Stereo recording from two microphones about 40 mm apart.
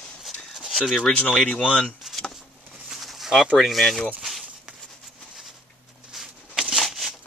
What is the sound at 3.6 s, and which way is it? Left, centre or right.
Speech, centre.